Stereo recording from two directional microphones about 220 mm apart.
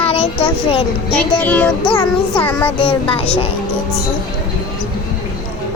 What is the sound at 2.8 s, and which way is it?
Speech, 25° left (ahead or behind).